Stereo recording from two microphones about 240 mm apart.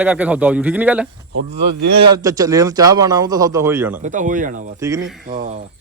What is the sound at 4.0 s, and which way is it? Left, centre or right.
Speech, right.